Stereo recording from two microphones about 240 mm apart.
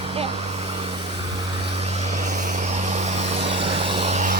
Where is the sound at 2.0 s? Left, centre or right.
Right.